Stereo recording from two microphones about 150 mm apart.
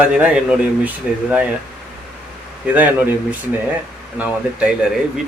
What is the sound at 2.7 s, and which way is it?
Speech, 10° right (ahead or behind).